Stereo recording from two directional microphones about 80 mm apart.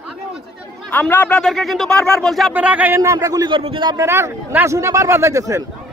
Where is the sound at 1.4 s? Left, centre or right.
Centre.